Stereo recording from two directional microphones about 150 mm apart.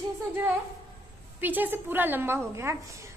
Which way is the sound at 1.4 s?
10° right (ahead or behind).